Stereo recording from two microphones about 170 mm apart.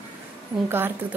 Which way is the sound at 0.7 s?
10° right (ahead or behind).